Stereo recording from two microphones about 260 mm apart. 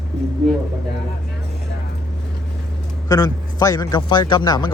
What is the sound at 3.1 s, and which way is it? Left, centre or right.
A man's voice, centre.